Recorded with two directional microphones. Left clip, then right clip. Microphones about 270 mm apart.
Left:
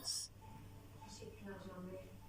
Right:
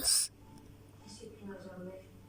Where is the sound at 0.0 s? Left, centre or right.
Right.